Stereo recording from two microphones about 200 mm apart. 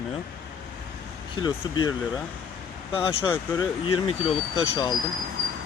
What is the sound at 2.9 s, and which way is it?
Speech, 25° left (ahead or behind).